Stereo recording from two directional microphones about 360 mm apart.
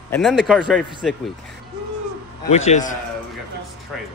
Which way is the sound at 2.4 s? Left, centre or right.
Centre.